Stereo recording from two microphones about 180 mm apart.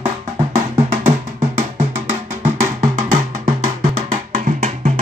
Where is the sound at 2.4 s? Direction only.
40° right (ahead or behind).